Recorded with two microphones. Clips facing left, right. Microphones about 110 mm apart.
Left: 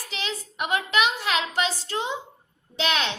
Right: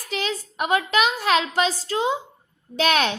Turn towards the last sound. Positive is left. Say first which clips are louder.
# right 5 dB
turn(degrees=-50)  # may be behind; listen again after turning